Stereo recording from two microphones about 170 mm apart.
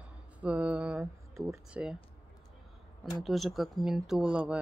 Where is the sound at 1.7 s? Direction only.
5° right (ahead or behind).